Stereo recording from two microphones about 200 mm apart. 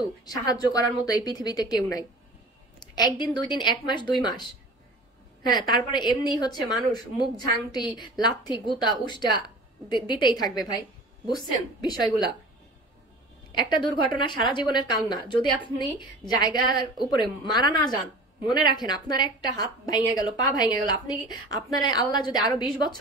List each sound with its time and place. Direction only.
0.3 s a woman's voice: 20° left (ahead or behind)
5.5 s a woman's voice: 20° left (ahead or behind)
13.5 s a woman's voice: 25° left (ahead or behind)